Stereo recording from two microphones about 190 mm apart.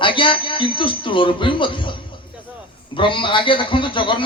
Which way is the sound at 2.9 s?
25° left (ahead or behind).